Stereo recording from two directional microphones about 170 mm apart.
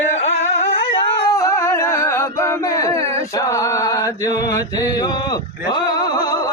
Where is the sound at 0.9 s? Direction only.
30° left (ahead or behind).